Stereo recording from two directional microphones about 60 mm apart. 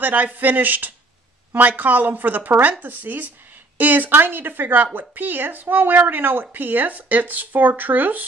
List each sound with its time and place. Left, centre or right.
0.0 s a woman's voice: right